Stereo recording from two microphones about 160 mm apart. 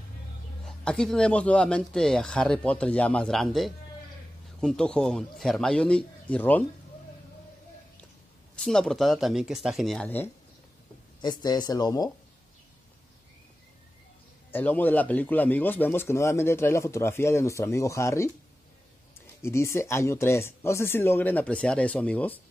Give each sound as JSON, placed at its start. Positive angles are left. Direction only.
{"t": 0.7, "sound": "speech", "side_deg": 5}
{"t": 8.5, "sound": "speech", "side_deg": 5}
{"t": 11.1, "sound": "speech", "side_deg": 25}
{"t": 14.5, "sound": "speech", "side_deg": 10}
{"t": 19.4, "sound": "speech", "side_deg": 15}